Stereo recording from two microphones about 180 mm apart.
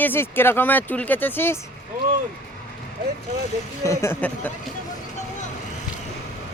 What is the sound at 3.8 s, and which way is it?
Speech, 15° left (ahead or behind).